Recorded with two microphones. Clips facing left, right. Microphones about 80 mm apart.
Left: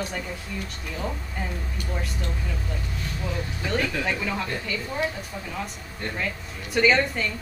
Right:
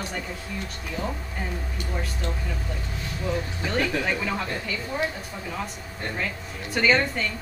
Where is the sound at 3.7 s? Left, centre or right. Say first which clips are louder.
Right 1 dB; centre.